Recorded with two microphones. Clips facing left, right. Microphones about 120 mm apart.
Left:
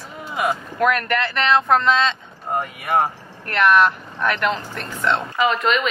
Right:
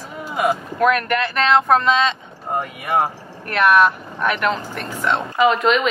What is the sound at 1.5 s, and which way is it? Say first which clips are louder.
Speech: right 1 dB; 15° right (ahead or behind).